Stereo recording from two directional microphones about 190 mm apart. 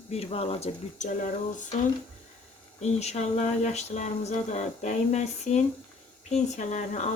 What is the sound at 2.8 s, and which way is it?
Speech, 35° left (ahead or behind).